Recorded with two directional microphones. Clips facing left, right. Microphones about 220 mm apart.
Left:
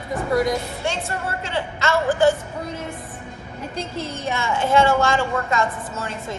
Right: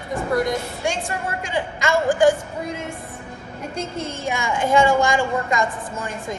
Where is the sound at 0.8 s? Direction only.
15° right (ahead or behind).